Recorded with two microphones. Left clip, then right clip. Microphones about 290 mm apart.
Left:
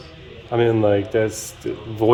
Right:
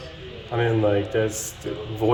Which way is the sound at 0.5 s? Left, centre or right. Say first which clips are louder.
Left 4 dB; left.